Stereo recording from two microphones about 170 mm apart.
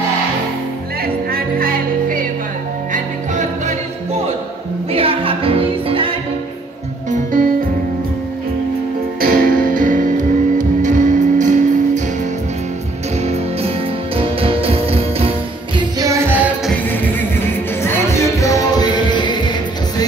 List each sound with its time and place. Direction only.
1.0 s music: 60° right (ahead or behind)
4.9 s music: 35° right (ahead or behind)
7.1 s music: 50° right (ahead or behind)
9.2 s music: 60° right (ahead or behind)
13.2 s music: 40° right (ahead or behind)
15.8 s music: 20° right (ahead or behind)
16.9 s music: 10° left (ahead or behind)